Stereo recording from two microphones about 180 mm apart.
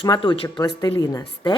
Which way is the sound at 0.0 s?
25° left (ahead or behind).